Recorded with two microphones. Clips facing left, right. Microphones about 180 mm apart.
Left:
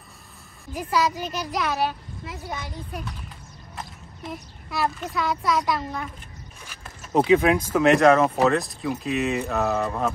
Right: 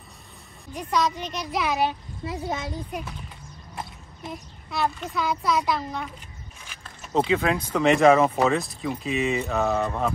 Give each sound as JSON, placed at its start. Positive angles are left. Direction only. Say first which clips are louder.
{"t": 0.7, "sound": "speech", "louder": "left 1 dB", "side_deg": 5}
{"t": 1.9, "sound": "a woman's voice", "louder": "right 3 dB", "side_deg": -25}
{"t": 4.2, "sound": "speech", "louder": "left 1 dB", "side_deg": 0}
{"t": 7.2, "sound": "speech", "louder": "left 7 dB", "side_deg": 15}
{"t": 7.7, "sound": "speech", "louder": "even", "side_deg": 0}